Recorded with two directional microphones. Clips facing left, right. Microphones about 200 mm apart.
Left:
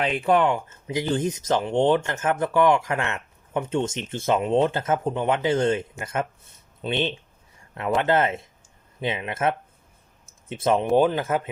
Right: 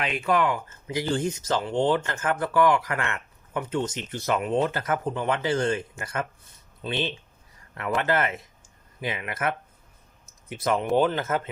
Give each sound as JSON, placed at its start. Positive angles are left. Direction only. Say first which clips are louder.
{"t": 0.0, "sound": "speech", "louder": "left 4 dB", "side_deg": 30}
{"t": 10.2, "sound": "a sound", "louder": "left 4 dB", "side_deg": 25}
{"t": 10.9, "sound": "speech", "louder": "left 1 dB", "side_deg": 15}